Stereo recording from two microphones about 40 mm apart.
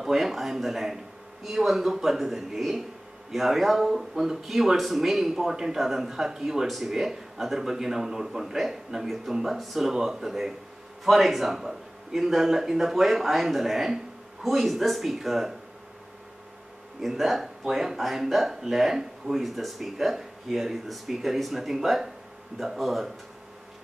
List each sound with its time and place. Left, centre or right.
0.0 s speech: centre
17.1 s speech: centre